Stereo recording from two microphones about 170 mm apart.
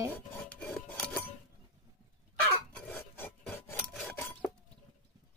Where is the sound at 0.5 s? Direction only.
10° left (ahead or behind).